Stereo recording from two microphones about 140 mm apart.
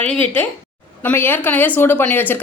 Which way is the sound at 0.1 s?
10° left (ahead or behind).